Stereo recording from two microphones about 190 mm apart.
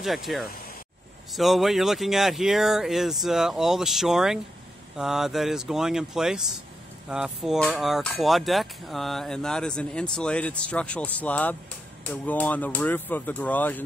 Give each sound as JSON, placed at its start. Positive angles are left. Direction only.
{"t": 0.0, "sound": "speech", "side_deg": 0}